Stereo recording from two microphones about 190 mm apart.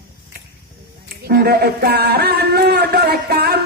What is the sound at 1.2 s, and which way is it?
Speech, 55° right (ahead or behind).